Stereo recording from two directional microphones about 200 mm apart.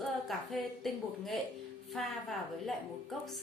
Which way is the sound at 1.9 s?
Centre (ahead or behind).